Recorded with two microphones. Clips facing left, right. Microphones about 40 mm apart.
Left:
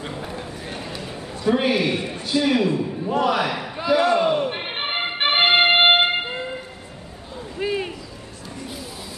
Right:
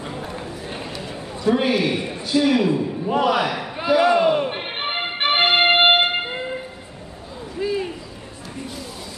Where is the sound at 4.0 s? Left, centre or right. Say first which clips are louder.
Right 3 dB; centre.